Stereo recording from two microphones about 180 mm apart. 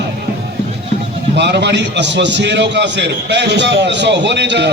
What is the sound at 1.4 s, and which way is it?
A man's voice, 70° right (ahead or behind).